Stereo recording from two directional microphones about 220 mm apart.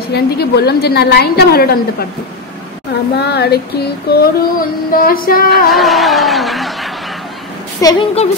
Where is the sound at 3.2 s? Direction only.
45° left (ahead or behind).